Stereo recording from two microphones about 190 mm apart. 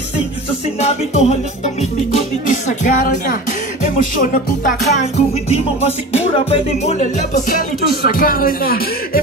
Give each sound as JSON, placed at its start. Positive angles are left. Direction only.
{"t": 0.7, "sound": "music", "side_deg": 35}